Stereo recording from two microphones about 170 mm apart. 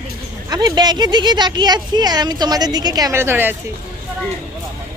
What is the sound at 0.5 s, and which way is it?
Speech, 25° right (ahead or behind).